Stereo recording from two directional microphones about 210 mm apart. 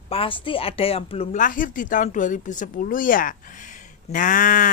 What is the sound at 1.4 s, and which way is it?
Speech, 40° left (ahead or behind).